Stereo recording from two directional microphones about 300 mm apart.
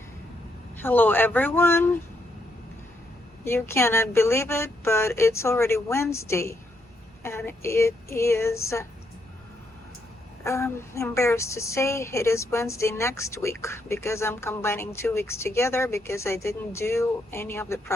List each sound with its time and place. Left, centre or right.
0.8 s a woman's voice: centre
3.4 s a woman's voice: centre
10.4 s a woman's voice: centre